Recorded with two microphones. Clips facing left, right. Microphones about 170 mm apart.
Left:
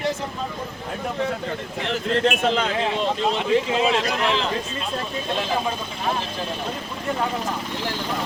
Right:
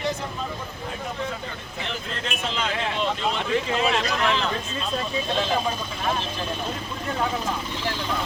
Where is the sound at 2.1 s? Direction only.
60° left (ahead or behind).